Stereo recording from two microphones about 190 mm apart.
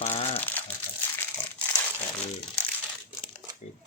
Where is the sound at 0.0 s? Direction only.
35° left (ahead or behind).